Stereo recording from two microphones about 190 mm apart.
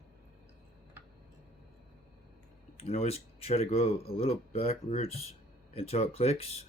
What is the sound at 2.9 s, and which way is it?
Speech, 30° left (ahead or behind).